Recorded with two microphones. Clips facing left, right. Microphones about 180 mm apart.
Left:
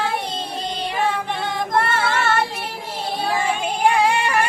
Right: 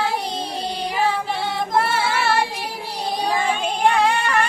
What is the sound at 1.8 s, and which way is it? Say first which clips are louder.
Child singing: even; 10° right (ahead or behind).